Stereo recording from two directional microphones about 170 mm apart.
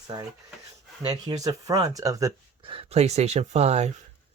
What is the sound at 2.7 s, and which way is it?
Speech, 40° right (ahead or behind).